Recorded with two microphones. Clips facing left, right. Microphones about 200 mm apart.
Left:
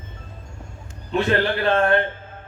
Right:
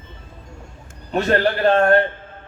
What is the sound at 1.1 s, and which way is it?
Speech, 45° right (ahead or behind).